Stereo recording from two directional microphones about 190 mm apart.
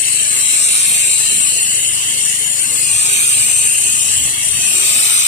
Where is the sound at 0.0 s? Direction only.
45° left (ahead or behind).